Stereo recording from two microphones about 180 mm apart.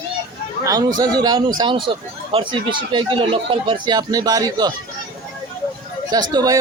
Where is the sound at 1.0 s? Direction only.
20° right (ahead or behind).